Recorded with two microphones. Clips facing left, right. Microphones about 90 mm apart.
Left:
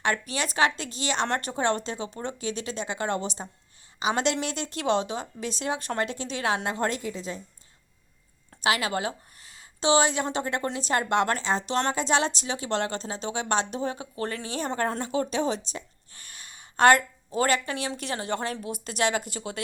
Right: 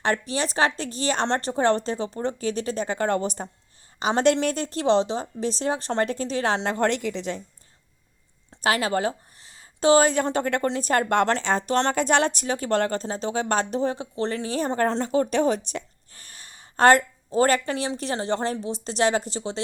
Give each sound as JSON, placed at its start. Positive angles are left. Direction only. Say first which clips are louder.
{"t": 0.0, "sound": "speech", "louder": "right 3 dB", "side_deg": -35}
{"t": 6.7, "sound": "a woman's voice", "louder": "right 5 dB", "side_deg": -65}
{"t": 8.6, "sound": "speech", "louder": "right 3 dB", "side_deg": -40}
{"t": 9.8, "sound": "speech", "louder": "right 5 dB", "side_deg": -45}
{"t": 15.0, "sound": "speech", "louder": "right 5 dB", "side_deg": -40}
{"t": 15.3, "sound": "speech", "louder": "right 5 dB", "side_deg": -50}
{"t": 16.1, "sound": "speech", "louder": "even", "side_deg": -35}